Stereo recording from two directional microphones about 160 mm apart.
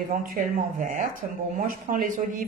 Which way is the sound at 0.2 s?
60° right (ahead or behind).